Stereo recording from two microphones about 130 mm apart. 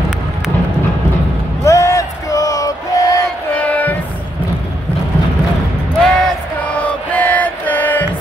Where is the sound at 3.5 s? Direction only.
10° left (ahead or behind).